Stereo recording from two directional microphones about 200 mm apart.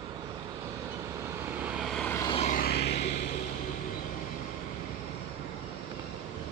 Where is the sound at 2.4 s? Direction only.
45° left (ahead or behind).